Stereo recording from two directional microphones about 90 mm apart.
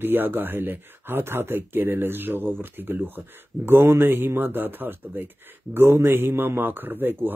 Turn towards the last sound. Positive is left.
turn(degrees=-25)  # may be behind; listen again after turning